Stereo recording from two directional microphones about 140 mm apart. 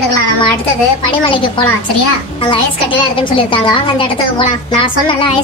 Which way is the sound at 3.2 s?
40° left (ahead or behind).